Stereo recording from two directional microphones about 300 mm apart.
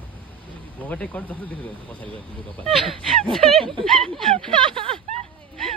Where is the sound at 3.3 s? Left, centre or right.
Centre.